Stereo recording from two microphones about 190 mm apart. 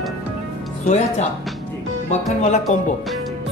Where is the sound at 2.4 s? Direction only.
40° left (ahead or behind).